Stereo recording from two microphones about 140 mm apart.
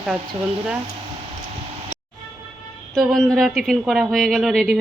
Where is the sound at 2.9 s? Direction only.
5° left (ahead or behind).